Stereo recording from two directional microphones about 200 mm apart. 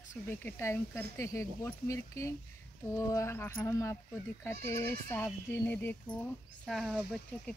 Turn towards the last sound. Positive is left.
turn(degrees=0)  # may be behind; listen again after turning